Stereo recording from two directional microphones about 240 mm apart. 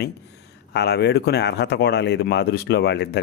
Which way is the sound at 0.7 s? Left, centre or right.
Left.